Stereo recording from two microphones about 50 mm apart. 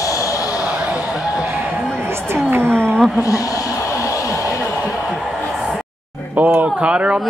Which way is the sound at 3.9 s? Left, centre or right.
Left.